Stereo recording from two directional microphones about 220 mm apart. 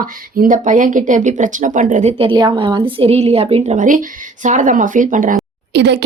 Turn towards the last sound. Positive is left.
turn(degrees=-50)  # may be behind; listen again after turning